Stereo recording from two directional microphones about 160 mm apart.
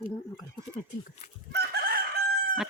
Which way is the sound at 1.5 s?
80° right.